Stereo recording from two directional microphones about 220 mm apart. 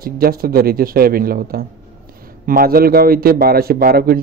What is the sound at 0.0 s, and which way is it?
A man's voice, 45° right (ahead or behind).